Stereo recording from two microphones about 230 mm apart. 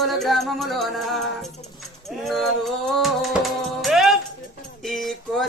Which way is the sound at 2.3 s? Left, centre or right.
Centre.